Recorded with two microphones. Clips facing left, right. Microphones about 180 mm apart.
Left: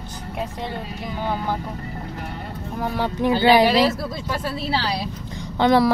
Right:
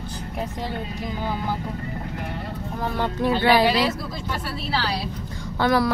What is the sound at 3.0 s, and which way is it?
Speech, 15° left (ahead or behind).